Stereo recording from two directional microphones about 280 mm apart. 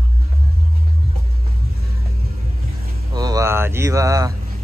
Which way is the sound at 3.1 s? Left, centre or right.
Centre.